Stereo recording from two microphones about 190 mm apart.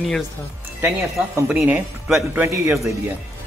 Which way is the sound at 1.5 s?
10° right (ahead or behind).